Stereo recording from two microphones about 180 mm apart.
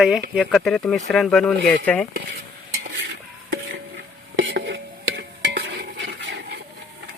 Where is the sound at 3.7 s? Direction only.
75° right (ahead or behind).